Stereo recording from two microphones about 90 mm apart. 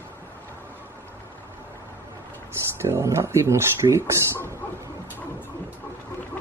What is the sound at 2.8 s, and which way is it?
Speech, 30° right (ahead or behind).